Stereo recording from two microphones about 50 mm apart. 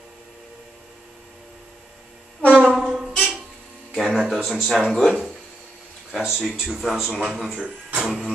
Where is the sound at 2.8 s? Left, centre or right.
Centre.